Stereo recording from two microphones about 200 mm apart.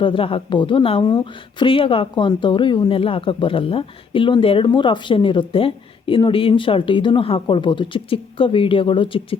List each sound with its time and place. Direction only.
0.0 s speech: 25° left (ahead or behind)